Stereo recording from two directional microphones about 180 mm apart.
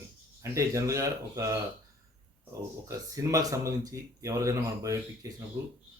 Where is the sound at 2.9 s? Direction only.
20° right (ahead or behind).